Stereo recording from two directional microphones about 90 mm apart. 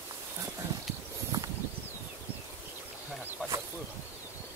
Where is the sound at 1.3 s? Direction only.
35° right (ahead or behind).